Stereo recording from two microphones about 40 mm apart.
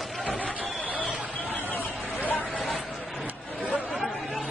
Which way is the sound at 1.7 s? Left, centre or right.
Left.